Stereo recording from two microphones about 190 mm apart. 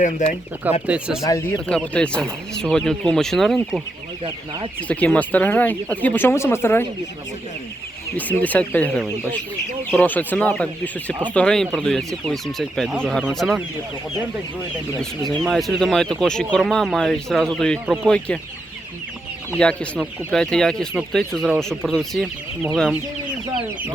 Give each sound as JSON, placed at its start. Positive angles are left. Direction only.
{"t": 0.0, "sound": "speech", "side_deg": 40}
{"t": 0.9, "sound": "speech", "side_deg": -5}
{"t": 1.2, "sound": "speech", "side_deg": 15}
{"t": 1.6, "sound": "speech", "side_deg": 5}
{"t": 4.9, "sound": "speech", "side_deg": 5}
{"t": 8.1, "sound": "speech", "side_deg": 10}
{"t": 15.2, "sound": "speech", "side_deg": 0}
{"t": 19.5, "sound": "speech", "side_deg": 5}